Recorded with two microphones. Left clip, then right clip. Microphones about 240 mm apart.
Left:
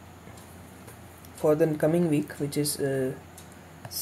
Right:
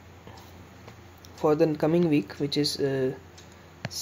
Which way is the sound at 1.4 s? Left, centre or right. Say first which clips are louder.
Even; centre.